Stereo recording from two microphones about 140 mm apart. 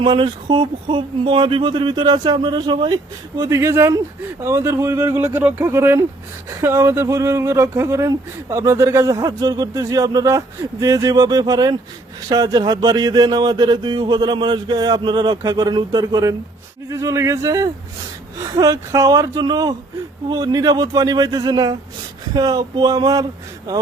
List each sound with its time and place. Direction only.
0.0 s speech: 35° right (ahead or behind)